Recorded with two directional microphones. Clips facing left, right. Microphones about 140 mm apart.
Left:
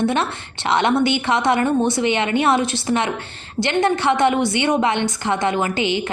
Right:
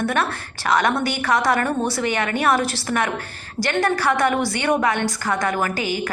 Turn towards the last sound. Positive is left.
turn(degrees=20)  # may be behind; listen again after turning